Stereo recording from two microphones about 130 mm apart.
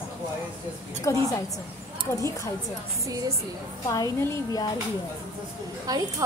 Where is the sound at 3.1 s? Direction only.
25° right (ahead or behind).